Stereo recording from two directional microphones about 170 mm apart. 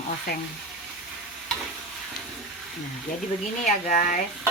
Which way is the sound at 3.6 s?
45° left (ahead or behind).